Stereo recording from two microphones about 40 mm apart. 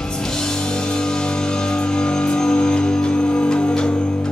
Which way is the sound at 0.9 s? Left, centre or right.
Centre.